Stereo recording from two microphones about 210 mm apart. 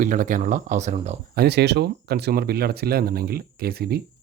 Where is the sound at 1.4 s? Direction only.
50° right (ahead or behind).